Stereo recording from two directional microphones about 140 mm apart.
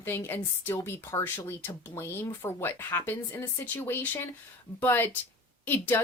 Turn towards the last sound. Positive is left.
turn(degrees=15)  # may be behind; listen again after turning